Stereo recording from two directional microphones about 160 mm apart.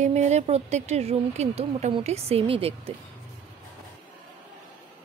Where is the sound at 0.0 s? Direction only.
45° right (ahead or behind).